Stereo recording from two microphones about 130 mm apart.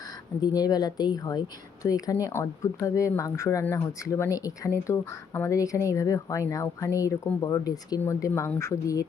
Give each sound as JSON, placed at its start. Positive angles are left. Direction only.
{"t": 0.4, "sound": "speech", "side_deg": 30}